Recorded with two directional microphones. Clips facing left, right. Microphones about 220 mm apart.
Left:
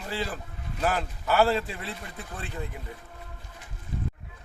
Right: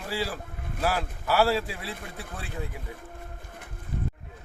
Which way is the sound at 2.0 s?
55° right (ahead or behind).